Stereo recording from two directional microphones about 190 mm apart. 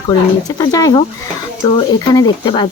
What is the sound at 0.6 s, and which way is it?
Speech, 20° left (ahead or behind).